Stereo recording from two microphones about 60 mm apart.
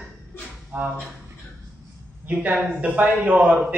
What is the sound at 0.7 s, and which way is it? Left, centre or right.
Speech, right.